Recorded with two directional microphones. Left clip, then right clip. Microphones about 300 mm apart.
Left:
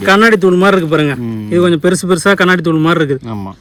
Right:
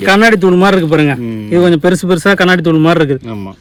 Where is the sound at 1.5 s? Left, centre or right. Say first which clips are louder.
Right 2 dB; centre.